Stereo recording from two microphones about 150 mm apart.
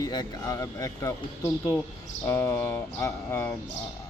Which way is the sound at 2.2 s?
15° left (ahead or behind).